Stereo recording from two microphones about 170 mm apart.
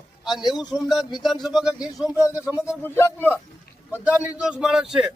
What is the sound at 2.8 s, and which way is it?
Speech, 10° left (ahead or behind).